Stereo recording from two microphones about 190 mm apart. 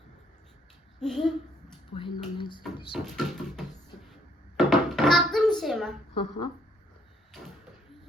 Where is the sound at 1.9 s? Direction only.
25° left (ahead or behind).